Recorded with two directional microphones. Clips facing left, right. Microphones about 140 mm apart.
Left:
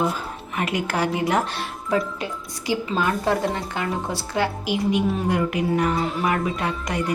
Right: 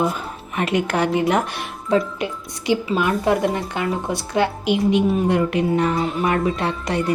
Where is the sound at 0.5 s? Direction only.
25° right (ahead or behind).